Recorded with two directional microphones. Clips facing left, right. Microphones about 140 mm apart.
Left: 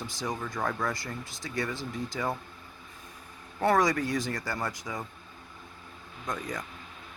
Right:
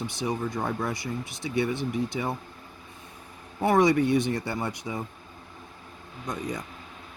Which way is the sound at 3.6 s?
20° right (ahead or behind).